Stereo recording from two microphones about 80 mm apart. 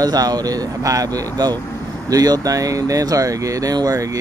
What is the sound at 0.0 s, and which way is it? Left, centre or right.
Speech, right.